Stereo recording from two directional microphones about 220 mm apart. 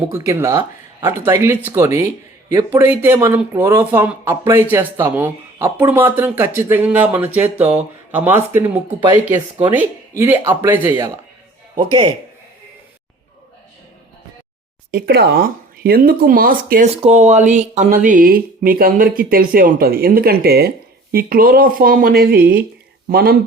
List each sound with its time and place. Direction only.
0.1 s speech: 10° right (ahead or behind)
11.7 s speech: 25° right (ahead or behind)
14.8 s speech: 45° right (ahead or behind)